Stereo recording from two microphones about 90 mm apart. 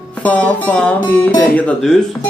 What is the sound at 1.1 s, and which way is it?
Speech, 20° left (ahead or behind).